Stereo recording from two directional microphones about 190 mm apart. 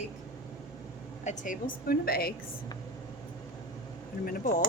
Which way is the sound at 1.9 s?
55° left (ahead or behind).